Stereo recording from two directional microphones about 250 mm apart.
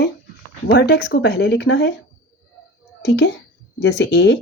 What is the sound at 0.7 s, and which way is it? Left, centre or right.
Speech, left.